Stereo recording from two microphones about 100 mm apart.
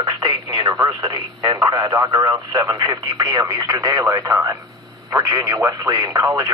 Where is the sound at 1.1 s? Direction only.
45° right (ahead or behind).